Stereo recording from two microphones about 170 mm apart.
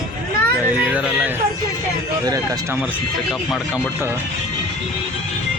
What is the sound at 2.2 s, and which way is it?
Speech, 20° right (ahead or behind).